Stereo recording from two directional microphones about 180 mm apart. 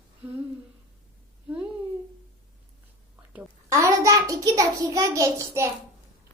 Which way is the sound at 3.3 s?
15° right (ahead or behind).